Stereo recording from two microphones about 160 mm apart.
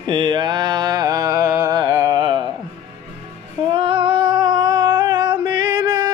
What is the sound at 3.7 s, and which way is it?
Female singing, 35° right (ahead or behind).